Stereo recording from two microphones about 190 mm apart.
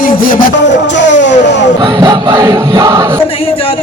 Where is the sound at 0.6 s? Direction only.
70° left (ahead or behind).